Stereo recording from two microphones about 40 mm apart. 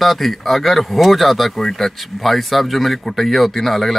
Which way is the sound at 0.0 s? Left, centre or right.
Centre.